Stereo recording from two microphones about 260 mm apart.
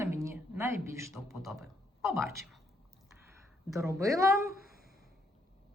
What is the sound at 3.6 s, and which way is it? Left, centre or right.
Speech, centre.